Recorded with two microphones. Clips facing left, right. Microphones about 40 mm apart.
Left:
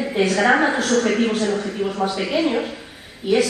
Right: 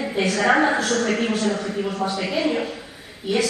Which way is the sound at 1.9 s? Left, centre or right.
Left.